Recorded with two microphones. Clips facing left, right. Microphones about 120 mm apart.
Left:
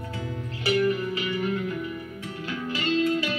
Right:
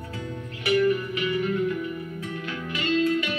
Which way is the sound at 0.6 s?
35° left (ahead or behind).